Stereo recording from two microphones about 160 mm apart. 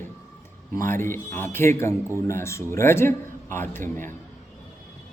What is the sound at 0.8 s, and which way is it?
A man's voice, 15° left (ahead or behind).